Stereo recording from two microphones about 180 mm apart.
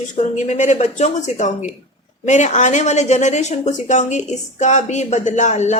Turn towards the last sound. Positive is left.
turn(degrees=40)  # may be behind; listen again after turning